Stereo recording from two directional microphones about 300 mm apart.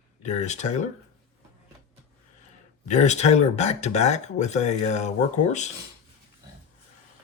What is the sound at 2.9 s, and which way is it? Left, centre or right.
Speech, left.